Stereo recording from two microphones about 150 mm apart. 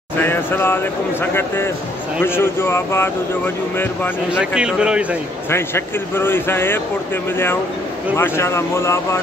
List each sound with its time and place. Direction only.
0.2 s speech: 15° left (ahead or behind)
2.2 s speech: 15° left (ahead or behind)
4.3 s speech: 5° right (ahead or behind)
5.5 s speech: 15° left (ahead or behind)
8.2 s speech: 15° left (ahead or behind)